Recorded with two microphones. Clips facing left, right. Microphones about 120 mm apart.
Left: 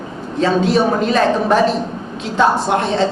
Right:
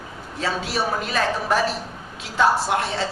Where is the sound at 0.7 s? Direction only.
25° left (ahead or behind).